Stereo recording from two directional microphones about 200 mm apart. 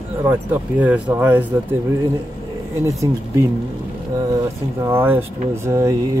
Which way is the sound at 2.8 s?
15° right (ahead or behind).